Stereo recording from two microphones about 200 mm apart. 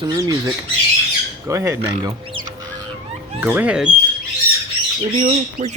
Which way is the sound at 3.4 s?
10° right (ahead or behind).